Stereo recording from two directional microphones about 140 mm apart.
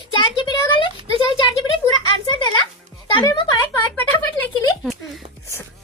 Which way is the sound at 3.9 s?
15° left (ahead or behind).